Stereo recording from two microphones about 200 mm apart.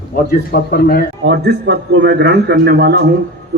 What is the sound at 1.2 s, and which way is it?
A man's voice, 60° right (ahead or behind).